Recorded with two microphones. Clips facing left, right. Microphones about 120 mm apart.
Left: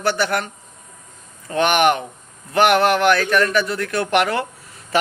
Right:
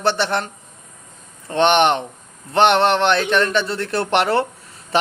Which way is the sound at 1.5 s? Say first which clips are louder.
Right 1 dB; 25° right (ahead or behind).